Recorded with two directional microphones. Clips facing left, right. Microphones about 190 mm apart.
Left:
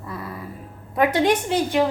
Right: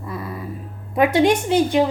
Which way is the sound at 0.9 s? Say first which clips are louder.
Right 3 dB; 20° right (ahead or behind).